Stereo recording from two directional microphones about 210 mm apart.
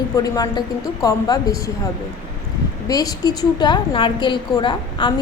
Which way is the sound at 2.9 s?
15° left (ahead or behind).